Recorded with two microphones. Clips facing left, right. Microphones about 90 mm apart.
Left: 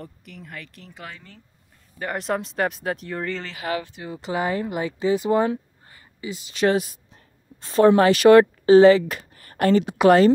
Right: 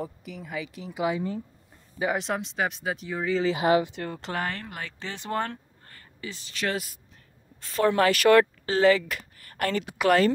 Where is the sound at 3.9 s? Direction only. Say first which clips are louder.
Left 3 dB; 5° left (ahead or behind).